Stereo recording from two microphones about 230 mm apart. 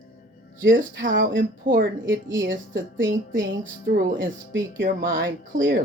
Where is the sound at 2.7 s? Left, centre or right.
Right.